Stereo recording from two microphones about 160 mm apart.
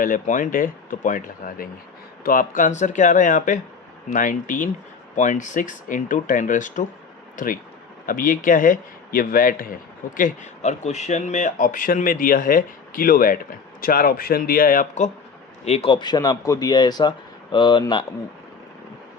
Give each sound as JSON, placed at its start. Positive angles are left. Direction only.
{"t": 0.0, "sound": "speech", "side_deg": 60}
{"t": 10.2, "sound": "speech", "side_deg": 50}
{"t": 15.6, "sound": "speech", "side_deg": 40}